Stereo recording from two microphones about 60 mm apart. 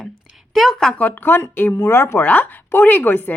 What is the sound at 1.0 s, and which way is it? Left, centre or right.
Speech, left.